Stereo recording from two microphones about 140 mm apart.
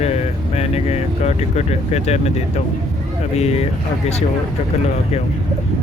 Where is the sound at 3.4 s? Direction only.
50° left (ahead or behind).